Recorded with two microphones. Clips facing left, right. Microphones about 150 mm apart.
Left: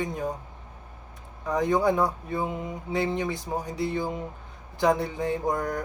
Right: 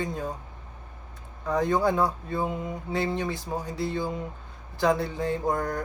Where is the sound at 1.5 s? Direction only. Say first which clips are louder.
Left 1 dB; 20° left (ahead or behind).